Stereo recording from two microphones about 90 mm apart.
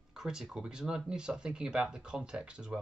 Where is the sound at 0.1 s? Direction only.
5° right (ahead or behind).